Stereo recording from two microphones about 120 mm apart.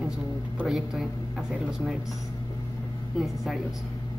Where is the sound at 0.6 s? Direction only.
Centre (ahead or behind).